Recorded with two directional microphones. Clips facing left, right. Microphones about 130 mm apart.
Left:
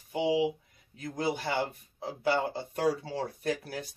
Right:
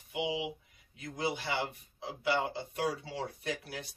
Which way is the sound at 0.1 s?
40° left (ahead or behind).